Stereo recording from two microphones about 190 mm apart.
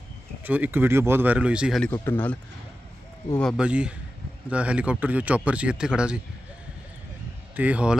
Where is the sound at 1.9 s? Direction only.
10° left (ahead or behind).